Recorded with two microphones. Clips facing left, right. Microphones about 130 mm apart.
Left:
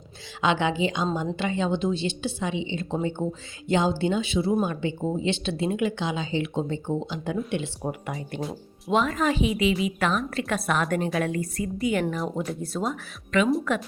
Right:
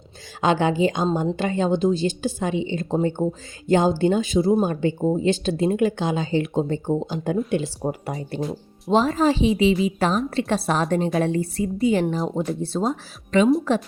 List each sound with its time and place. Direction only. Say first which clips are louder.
0.4 s a woman's voice: right 4 dB; 40° right (ahead or behind)
7.8 s a woman's voice: right 4 dB; 30° right (ahead or behind)